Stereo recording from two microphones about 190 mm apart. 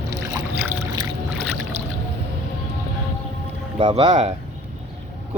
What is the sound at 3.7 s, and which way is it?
Speech, 30° right (ahead or behind).